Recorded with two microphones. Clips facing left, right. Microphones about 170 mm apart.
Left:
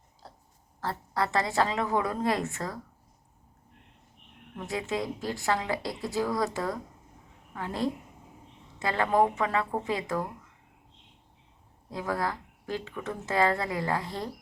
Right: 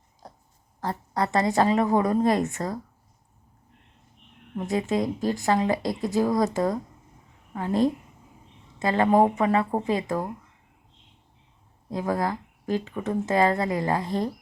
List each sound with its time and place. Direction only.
0.2 s a sound: 15° right (ahead or behind)
0.8 s a woman's voice: 15° right (ahead or behind)
4.5 s a woman's voice: 15° right (ahead or behind)
7.5 s a woman's voice: 20° right (ahead or behind)
11.9 s a woman's voice: 20° right (ahead or behind)